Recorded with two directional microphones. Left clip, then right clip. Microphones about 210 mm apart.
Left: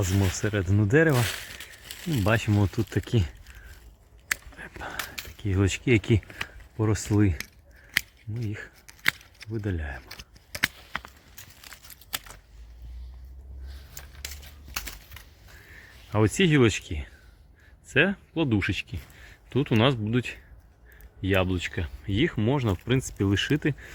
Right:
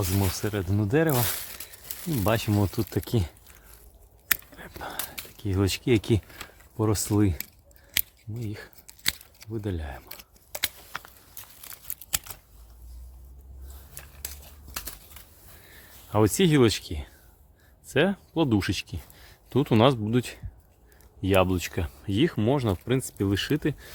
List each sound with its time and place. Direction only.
0.1 s speech: 5° right (ahead or behind)
2.2 s speech: centre (ahead or behind)
4.5 s whispering: centre (ahead or behind)
5.1 s speech: centre (ahead or behind)
7.9 s a sound: centre (ahead or behind)
16.1 s speech: 5° right (ahead or behind)